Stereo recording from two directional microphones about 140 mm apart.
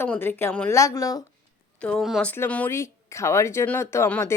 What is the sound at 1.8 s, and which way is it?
Speech, 10° left (ahead or behind).